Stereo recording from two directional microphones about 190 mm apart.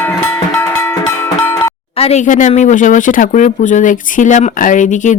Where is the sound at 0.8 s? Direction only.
15° left (ahead or behind).